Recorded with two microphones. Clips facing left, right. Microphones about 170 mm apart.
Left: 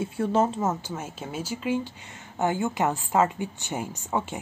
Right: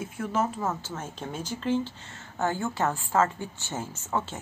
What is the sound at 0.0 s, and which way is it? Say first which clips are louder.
Speech: left 5 dB; 30° left (ahead or behind).